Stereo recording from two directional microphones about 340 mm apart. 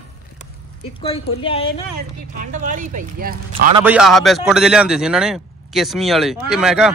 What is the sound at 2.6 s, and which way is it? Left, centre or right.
Speech, right.